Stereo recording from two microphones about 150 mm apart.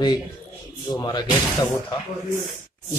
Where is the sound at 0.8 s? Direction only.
30° left (ahead or behind).